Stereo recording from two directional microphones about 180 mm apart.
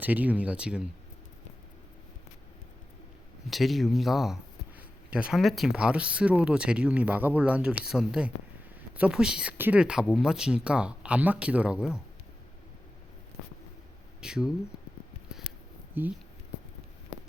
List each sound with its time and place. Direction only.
0.0 s speech: 10° right (ahead or behind)
3.5 s speech: centre (ahead or behind)
14.2 s speech: 5° right (ahead or behind)
16.0 s speech: 10° right (ahead or behind)